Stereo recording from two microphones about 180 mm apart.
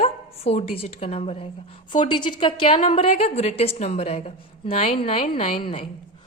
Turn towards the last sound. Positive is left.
turn(degrees=30)  # may be behind; listen again after turning